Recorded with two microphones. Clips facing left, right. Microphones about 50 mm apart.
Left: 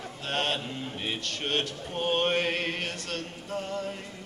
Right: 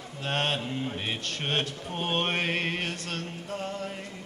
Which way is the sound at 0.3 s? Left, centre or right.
Centre.